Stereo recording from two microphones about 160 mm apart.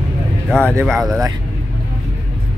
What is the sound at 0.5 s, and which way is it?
Speech, 5° left (ahead or behind).